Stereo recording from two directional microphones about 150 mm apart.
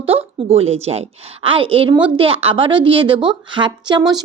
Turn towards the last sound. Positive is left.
turn(degrees=-30)  # may be behind; listen again after turning